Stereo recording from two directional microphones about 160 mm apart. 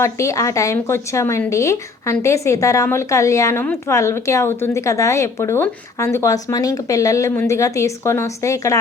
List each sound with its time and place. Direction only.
0.0 s speech: 20° left (ahead or behind)